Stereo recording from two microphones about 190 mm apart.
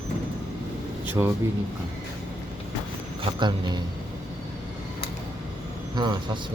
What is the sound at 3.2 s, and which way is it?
Speech, 25° right (ahead or behind).